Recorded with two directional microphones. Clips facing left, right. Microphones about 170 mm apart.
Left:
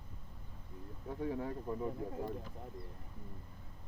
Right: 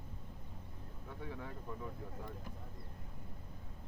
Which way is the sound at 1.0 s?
35° left (ahead or behind).